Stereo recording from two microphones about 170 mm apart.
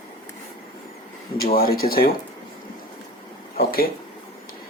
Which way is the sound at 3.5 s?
60° left (ahead or behind).